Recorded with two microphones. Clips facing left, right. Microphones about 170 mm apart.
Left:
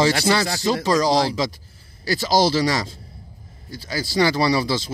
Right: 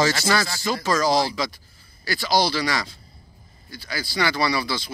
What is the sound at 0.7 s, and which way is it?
Speech, 25° left (ahead or behind).